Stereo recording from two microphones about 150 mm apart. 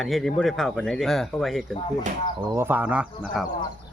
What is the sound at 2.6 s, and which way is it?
Speech, 15° right (ahead or behind).